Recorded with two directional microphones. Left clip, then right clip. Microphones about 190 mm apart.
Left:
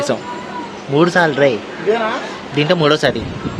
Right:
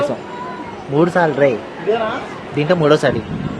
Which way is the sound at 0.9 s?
Centre (ahead or behind).